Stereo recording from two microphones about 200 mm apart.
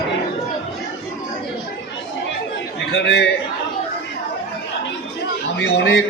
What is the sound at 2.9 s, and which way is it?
Speech, 60° left (ahead or behind).